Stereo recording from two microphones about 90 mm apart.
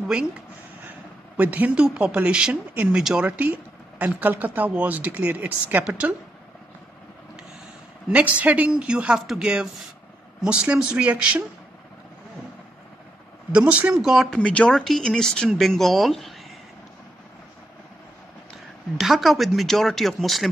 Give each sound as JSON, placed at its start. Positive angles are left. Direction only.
{"t": 1.3, "sound": "speech", "side_deg": -15}
{"t": 8.1, "sound": "speech", "side_deg": -15}
{"t": 13.5, "sound": "speech", "side_deg": -15}
{"t": 13.9, "sound": "speech", "side_deg": -5}
{"t": 14.4, "sound": "speech", "side_deg": 10}
{"t": 18.9, "sound": "speech", "side_deg": 0}